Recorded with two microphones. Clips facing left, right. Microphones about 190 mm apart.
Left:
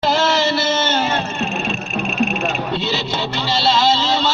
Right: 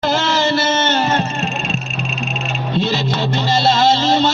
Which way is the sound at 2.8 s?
50° right (ahead or behind).